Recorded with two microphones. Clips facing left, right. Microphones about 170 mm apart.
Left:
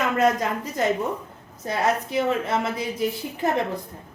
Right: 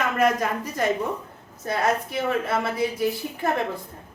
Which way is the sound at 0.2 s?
20° left (ahead or behind).